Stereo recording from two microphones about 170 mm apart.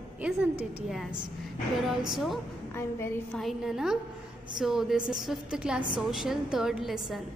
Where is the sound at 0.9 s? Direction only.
Centre (ahead or behind).